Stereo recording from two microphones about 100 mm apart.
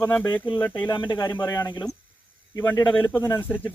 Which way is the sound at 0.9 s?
50° left (ahead or behind).